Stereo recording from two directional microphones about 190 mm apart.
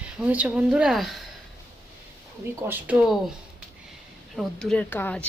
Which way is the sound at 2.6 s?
10° right (ahead or behind).